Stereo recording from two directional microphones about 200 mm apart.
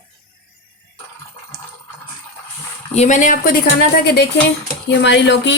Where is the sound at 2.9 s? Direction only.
35° left (ahead or behind); by 5.5 s 60° left (ahead or behind).